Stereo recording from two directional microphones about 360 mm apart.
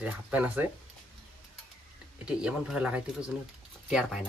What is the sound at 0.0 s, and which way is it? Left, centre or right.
Speech, centre.